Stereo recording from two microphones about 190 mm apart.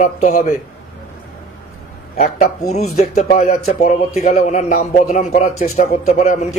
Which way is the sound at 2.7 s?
35° left (ahead or behind).